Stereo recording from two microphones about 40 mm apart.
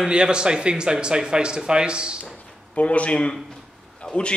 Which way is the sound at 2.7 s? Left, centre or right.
Left.